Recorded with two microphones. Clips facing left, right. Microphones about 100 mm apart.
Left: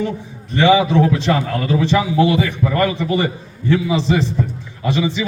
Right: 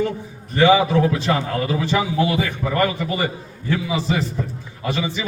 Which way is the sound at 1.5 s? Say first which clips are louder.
Left 4 dB; 10° right (ahead or behind).